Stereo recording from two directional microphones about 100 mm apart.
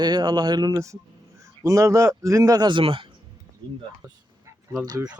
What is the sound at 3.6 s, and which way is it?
Speech, 50° right (ahead or behind).